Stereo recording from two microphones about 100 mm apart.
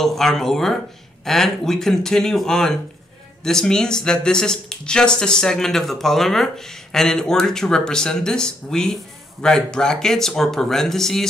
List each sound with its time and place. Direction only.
0.0 s speech: 5° left (ahead or behind)